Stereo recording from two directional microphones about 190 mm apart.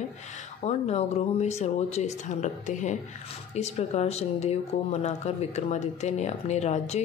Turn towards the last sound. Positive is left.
turn(degrees=35)  # may be behind; listen again after turning